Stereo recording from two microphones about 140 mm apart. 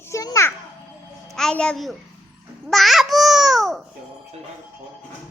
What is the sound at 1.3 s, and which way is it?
Speech, 5° left (ahead or behind).